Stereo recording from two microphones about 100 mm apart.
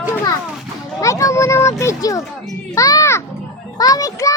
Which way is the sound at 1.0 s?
30° left (ahead or behind).